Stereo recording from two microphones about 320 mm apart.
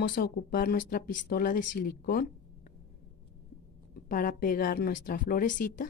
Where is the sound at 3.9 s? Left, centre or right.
Left.